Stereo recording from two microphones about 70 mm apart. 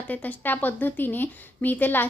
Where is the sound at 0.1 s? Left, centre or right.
Left.